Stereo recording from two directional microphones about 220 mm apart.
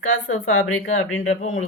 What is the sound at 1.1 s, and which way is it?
Speech, 60° left (ahead or behind).